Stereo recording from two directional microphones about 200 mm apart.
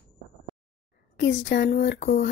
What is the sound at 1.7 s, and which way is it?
Speech, 40° left (ahead or behind).